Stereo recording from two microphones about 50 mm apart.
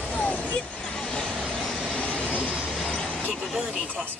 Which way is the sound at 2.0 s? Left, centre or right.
Left.